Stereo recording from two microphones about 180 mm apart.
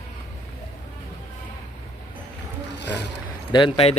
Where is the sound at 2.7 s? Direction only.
70° left (ahead or behind).